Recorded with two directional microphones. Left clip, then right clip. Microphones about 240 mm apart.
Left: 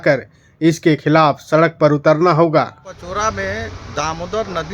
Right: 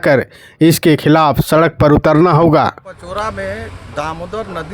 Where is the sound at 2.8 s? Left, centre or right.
Centre.